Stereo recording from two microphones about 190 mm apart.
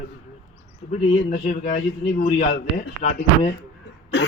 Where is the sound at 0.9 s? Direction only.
40° left (ahead or behind).